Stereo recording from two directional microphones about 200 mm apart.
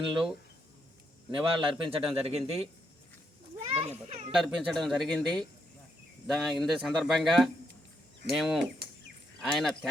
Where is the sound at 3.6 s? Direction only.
30° right (ahead or behind).